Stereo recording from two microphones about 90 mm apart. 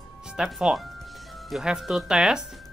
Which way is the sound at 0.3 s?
5° right (ahead or behind).